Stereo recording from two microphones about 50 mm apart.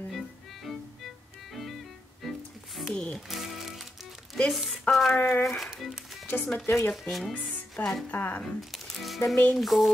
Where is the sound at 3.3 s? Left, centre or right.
Centre.